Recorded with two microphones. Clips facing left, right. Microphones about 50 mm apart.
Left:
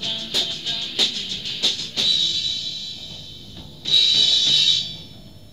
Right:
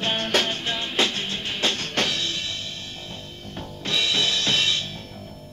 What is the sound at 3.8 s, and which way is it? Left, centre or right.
Drum kit, right.